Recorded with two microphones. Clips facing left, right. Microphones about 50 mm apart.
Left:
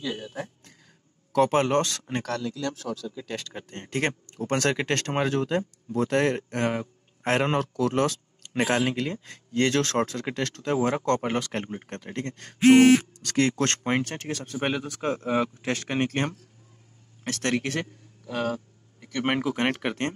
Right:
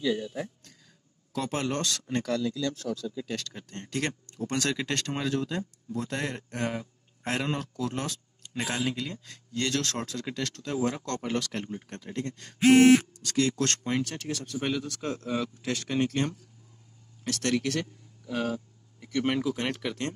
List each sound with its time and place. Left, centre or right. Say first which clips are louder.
0.2 s speech: right 1 dB; left
2.2 s speech: right 2 dB; left
3.3 s speech: left 1 dB; centre
3.5 s speech: left 3 dB; left
5.9 s a man's voice: left 10 dB; left
8.5 s speech: left 6 dB; left
19.1 s speech: left 2 dB; left